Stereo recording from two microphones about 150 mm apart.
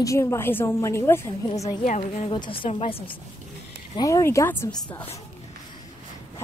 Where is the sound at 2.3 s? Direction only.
35° left (ahead or behind).